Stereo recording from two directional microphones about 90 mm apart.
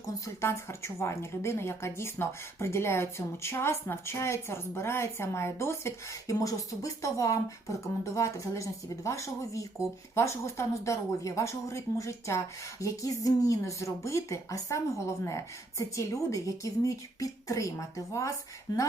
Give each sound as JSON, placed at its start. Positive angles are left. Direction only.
{"t": 0.4, "sound": "a woman's voice", "side_deg": 30}